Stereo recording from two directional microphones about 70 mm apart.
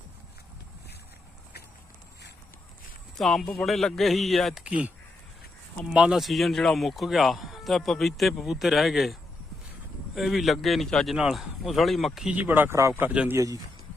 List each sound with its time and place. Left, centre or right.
3.2 s speech: centre
4.5 s speech: centre
5.9 s speech: centre
6.1 s speech: centre
10.2 s speech: centre
11.1 s speech: centre
12.2 s speech: right
13.3 s speech: right